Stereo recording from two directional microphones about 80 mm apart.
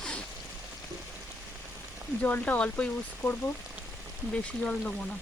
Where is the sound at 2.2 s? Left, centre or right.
Centre.